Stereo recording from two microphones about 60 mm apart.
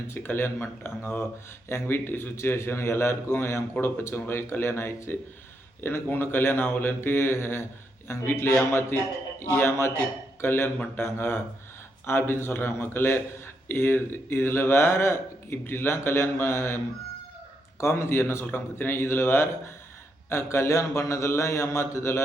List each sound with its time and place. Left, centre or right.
0.1 s a man's voice: left